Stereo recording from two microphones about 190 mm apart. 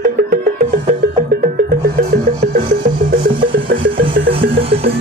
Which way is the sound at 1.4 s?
40° right (ahead or behind).